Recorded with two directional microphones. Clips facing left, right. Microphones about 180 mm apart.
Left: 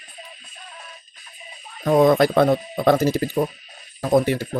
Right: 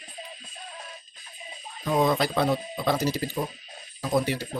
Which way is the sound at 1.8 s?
55° left (ahead or behind).